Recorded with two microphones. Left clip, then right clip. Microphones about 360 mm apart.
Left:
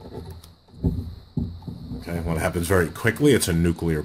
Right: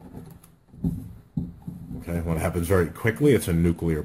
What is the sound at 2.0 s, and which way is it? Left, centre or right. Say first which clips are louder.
Speech: left 2 dB; centre.